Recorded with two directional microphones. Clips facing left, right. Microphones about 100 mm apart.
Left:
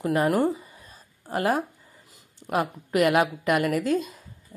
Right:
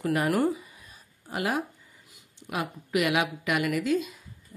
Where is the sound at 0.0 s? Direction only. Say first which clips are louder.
Left 3 dB; 25° left (ahead or behind).